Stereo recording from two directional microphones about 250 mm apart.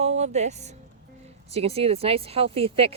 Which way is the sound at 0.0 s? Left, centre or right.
Right.